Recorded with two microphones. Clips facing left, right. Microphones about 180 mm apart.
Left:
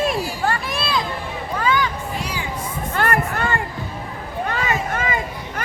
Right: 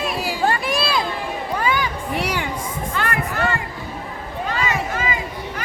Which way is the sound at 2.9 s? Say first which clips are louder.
Left 5 dB; 50° left (ahead or behind).